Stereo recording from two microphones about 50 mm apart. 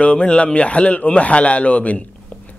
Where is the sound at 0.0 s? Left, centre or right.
Left.